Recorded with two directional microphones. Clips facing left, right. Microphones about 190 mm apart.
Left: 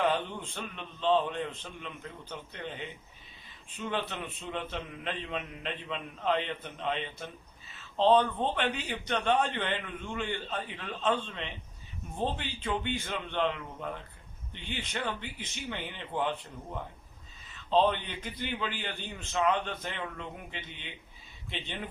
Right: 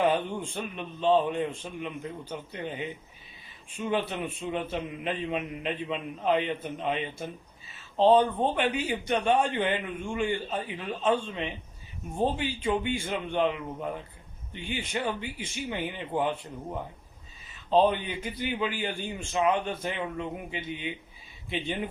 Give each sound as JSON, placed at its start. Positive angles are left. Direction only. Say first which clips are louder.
{"t": 0.0, "sound": "a man's voice", "louder": "right 4 dB", "side_deg": -15}
{"t": 17.7, "sound": "a man's voice", "louder": "right 3 dB", "side_deg": -10}